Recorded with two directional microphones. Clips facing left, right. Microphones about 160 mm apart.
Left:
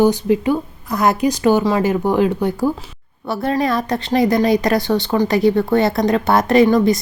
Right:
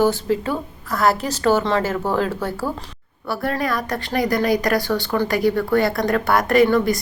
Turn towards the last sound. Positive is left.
turn(degrees=20)  # may be behind; listen again after turning